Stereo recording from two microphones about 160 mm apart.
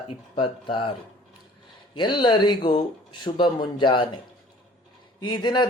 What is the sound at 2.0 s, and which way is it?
Speech, 30° left (ahead or behind).